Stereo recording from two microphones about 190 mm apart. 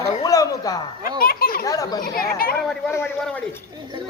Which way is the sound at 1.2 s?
50° left (ahead or behind).